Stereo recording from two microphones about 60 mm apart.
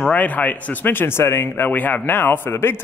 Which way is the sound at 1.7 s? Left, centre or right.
Left.